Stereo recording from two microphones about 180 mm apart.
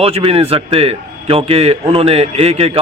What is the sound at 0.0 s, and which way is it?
Speech, 35° right (ahead or behind).